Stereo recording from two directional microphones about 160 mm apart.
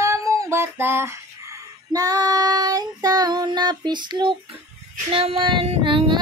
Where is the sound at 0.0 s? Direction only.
20° right (ahead or behind).